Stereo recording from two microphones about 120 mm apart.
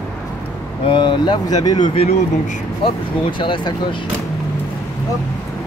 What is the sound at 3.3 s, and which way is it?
Speech, 45° left (ahead or behind).